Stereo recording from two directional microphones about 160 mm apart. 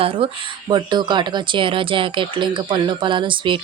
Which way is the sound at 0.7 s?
30° right (ahead or behind).